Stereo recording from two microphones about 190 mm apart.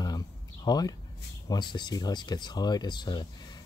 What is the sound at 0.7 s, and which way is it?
Speech, 20° left (ahead or behind).